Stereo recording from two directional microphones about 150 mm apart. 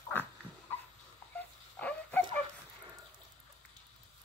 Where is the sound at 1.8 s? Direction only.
10° left (ahead or behind).